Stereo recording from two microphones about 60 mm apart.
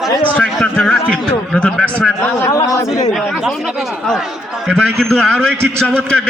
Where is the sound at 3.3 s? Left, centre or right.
Centre.